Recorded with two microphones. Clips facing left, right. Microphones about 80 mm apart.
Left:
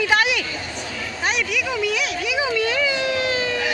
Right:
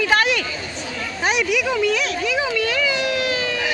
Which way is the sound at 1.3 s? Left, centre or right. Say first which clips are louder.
Right 4 dB; centre.